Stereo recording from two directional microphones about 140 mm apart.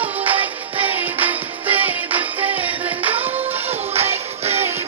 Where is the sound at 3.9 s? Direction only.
50° right (ahead or behind).